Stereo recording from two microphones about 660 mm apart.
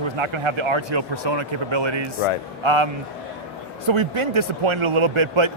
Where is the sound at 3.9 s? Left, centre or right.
Right.